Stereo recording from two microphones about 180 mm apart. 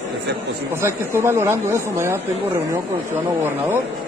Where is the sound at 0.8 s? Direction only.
15° right (ahead or behind).